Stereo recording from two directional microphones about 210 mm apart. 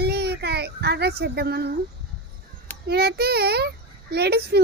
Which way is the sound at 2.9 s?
50° right (ahead or behind).